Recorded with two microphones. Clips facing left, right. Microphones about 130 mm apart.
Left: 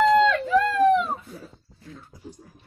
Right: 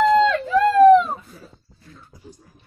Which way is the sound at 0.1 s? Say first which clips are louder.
Right 2 dB; 35° right (ahead or behind).